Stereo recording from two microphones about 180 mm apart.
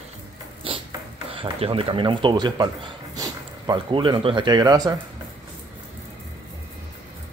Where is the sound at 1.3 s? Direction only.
30° right (ahead or behind).